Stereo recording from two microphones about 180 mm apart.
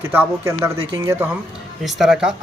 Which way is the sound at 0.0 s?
10° right (ahead or behind).